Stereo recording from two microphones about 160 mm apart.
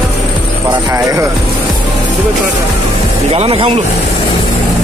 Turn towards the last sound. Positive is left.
turn(degrees=-35)  # may be behind; listen again after turning